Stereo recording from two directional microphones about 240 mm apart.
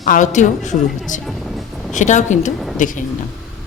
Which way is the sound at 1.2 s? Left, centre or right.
Centre.